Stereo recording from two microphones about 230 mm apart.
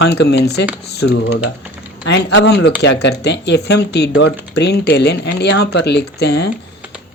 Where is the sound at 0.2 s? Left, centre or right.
Left.